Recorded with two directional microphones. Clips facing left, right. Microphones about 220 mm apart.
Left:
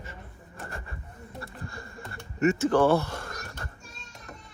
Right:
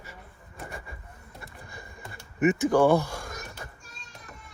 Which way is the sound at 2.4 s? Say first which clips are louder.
Right 1 dB; 15° right (ahead or behind).